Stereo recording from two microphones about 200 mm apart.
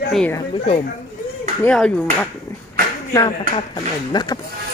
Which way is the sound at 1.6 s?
5° left (ahead or behind).